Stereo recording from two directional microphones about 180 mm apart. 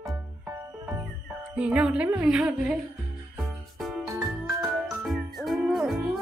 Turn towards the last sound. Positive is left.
turn(degrees=0)  # may be behind; listen again after turning